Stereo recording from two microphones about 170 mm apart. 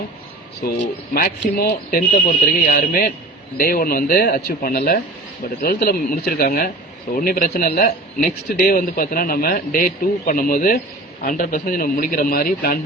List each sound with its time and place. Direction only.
1.1 s a man's voice: 60° left (ahead or behind)